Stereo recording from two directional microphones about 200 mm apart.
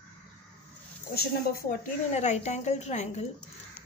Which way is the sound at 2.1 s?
35° left (ahead or behind).